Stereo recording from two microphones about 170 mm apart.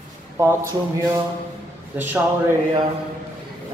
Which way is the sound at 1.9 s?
10° right (ahead or behind).